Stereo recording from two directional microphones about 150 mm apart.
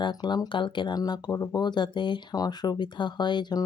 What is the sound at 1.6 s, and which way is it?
Speech, 30° left (ahead or behind).